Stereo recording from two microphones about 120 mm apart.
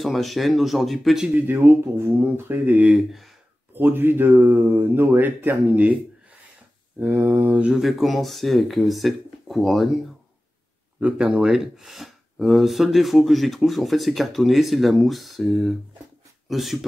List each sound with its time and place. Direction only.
0.0 s speech: centre (ahead or behind)
1.5 s speech: 20° right (ahead or behind)
3.7 s speech: 15° right (ahead or behind)
7.0 s speech: 15° right (ahead or behind); by 9.8 s centre (ahead or behind)
11.0 s speech: 10° right (ahead or behind)